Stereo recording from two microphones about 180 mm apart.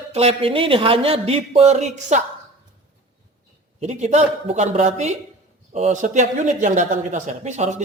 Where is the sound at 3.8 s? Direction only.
40° right (ahead or behind).